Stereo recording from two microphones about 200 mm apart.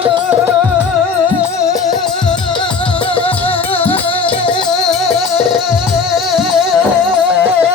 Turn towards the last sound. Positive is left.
turn(degrees=0)  # may be behind; listen again after turning